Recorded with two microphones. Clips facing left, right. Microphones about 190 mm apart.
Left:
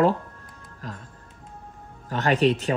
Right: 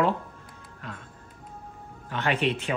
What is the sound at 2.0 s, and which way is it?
Speech, 40° left (ahead or behind).